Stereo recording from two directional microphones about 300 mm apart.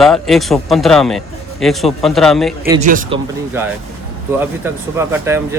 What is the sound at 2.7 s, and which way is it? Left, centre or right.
Speech, right.